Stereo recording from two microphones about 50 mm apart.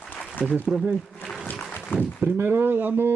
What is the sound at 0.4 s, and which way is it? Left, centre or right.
Speech, left.